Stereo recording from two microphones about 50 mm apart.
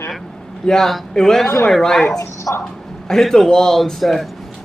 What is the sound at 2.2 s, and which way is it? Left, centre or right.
Speech, left.